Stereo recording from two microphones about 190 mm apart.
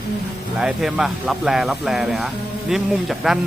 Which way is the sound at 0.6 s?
5° right (ahead or behind).